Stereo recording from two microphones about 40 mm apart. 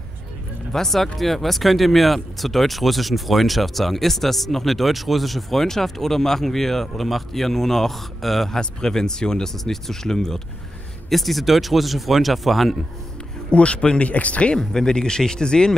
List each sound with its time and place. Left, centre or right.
0.7 s speech: centre
8.5 s speech: centre
11.1 s speech: centre
13.5 s speech: left
14.6 s speech: centre